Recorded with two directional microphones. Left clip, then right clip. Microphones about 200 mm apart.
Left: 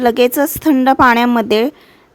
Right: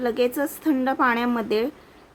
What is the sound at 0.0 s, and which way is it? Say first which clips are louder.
Speech: left 11 dB; 50° left (ahead or behind).